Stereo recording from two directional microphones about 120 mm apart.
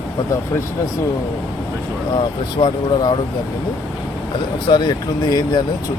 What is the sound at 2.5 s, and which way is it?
Speech, 40° left (ahead or behind).